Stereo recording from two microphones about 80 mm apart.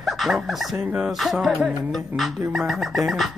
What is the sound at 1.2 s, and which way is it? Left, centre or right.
Speech, centre.